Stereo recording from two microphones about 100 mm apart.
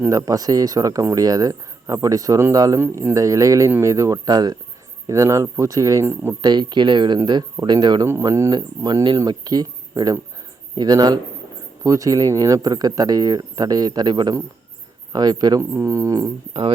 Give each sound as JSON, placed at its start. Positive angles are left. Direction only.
{"t": 0.1, "sound": "speech", "side_deg": -35}
{"t": 2.8, "sound": "speech", "side_deg": -20}
{"t": 3.2, "sound": "speech", "side_deg": -35}
{"t": 6.4, "sound": "speech", "side_deg": -45}
{"t": 8.0, "sound": "speech", "side_deg": -30}
{"t": 8.4, "sound": "speech", "side_deg": -45}
{"t": 15.7, "sound": "speech", "side_deg": -30}